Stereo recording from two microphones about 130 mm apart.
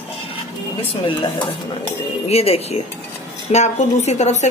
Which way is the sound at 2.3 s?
50° left (ahead or behind).